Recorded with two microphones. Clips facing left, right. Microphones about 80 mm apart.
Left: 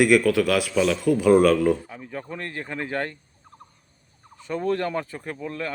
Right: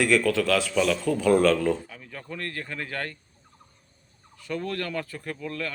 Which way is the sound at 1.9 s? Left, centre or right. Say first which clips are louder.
Left 5 dB; left.